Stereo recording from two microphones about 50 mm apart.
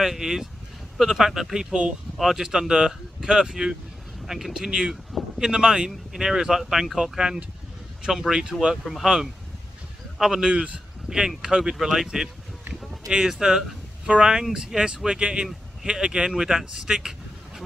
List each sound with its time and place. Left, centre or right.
0.0 s speech: centre